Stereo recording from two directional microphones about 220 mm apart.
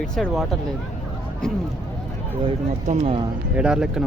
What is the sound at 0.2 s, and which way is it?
Speech, centre (ahead or behind).